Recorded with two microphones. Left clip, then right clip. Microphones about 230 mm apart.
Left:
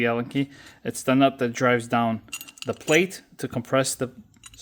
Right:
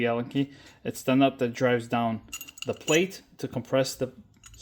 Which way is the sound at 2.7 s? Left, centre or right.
Left.